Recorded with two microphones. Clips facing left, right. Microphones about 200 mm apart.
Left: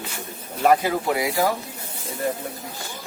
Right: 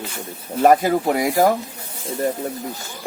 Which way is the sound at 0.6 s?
45° right (ahead or behind).